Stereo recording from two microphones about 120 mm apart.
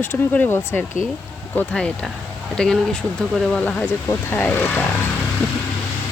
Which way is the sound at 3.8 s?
20° left (ahead or behind).